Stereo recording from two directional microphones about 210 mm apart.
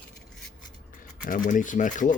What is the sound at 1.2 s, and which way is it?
Speech, 40° left (ahead or behind).